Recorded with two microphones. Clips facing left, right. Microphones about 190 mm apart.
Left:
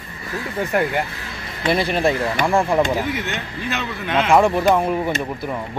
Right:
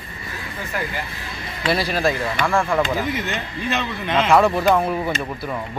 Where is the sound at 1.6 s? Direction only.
20° left (ahead or behind).